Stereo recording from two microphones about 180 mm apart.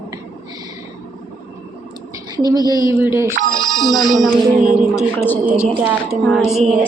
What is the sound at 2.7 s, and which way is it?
Speech, 15° right (ahead or behind).